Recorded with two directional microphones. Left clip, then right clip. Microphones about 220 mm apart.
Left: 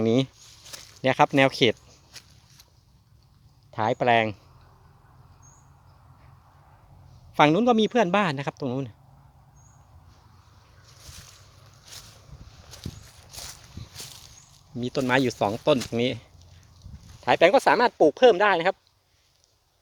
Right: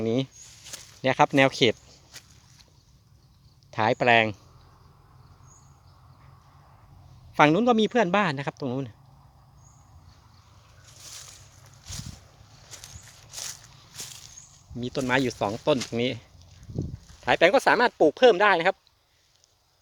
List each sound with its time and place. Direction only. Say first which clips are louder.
0.0 s speech: left 4 dB; 25° left (ahead or behind)
0.6 s a sound: left 1 dB; centre (ahead or behind)
3.7 s speech: right 1 dB; 5° right (ahead or behind)
7.3 s speech: even; 5° left (ahead or behind)
13.1 s walk: right 7 dB; centre (ahead or behind)
14.8 s speech: left 2 dB; 20° left (ahead or behind)
17.2 s speech: left 1 dB; 15° left (ahead or behind)